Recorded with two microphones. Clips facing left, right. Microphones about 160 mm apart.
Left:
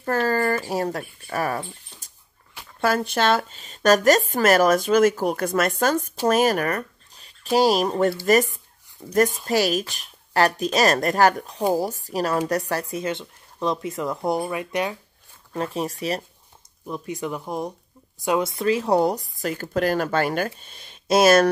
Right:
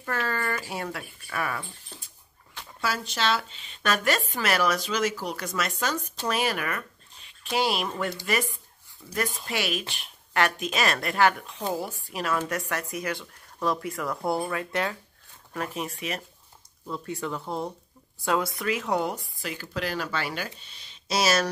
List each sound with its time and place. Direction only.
0.0 s speech: 40° left (ahead or behind)
2.8 s a woman's voice: 55° left (ahead or behind); by 15.0 s 15° left (ahead or behind)
15.5 s speech: 30° left (ahead or behind)
16.8 s a woman's voice: 15° left (ahead or behind); by 21.5 s 55° left (ahead or behind)